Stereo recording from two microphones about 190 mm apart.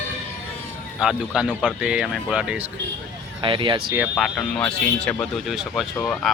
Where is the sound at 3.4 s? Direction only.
25° right (ahead or behind).